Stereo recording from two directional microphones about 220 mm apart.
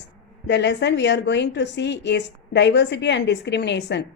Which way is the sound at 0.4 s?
50° left (ahead or behind).